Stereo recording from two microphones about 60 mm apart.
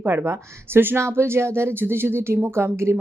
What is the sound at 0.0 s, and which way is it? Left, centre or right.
Speech, right.